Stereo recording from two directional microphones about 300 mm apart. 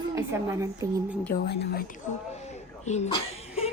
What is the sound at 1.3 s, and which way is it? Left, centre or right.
A woman's voice, left.